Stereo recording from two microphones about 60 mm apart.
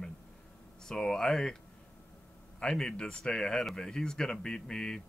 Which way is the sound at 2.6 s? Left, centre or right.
Centre.